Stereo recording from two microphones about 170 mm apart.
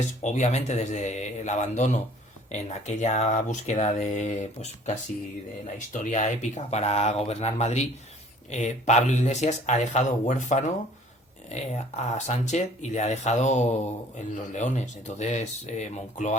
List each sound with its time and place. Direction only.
0.2 s speech: 45° left (ahead or behind)